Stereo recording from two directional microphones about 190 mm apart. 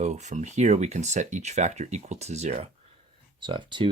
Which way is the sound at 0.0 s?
40° right (ahead or behind).